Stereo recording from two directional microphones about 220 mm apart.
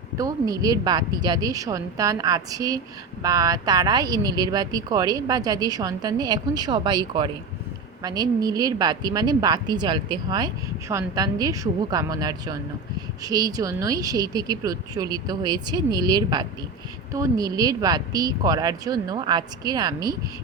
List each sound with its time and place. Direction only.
0.2 s a woman's voice: 15° right (ahead or behind)